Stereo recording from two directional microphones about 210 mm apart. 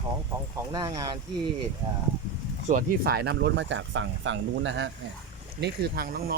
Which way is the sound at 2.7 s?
45° right (ahead or behind).